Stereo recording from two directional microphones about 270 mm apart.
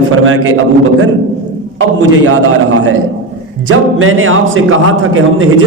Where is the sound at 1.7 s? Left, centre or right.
Right.